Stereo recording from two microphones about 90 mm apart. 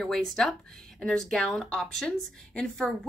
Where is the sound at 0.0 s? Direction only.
5° left (ahead or behind).